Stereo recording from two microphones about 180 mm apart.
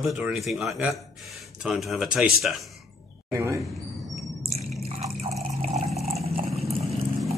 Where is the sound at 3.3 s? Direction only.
15° right (ahead or behind).